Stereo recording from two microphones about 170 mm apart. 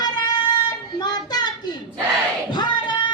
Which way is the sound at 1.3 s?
25° left (ahead or behind).